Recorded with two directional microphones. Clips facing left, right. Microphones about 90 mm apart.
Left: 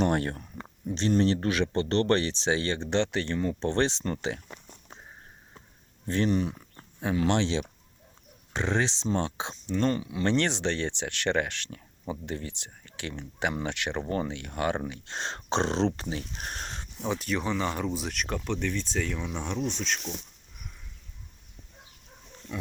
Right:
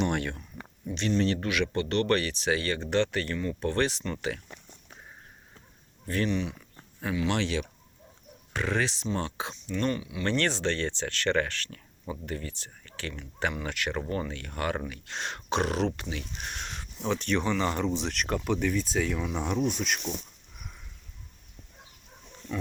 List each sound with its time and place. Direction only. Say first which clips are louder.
0.0 s speech: left 3 dB; 35° left (ahead or behind)
6.2 s speech: left 3 dB; 40° left (ahead or behind)
10.2 s speech: left 1 dB; 20° left (ahead or behind)
17.1 s speech: right 2 dB; 5° left (ahead or behind)